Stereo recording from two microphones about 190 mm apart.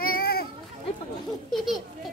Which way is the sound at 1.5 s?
Centre (ahead or behind).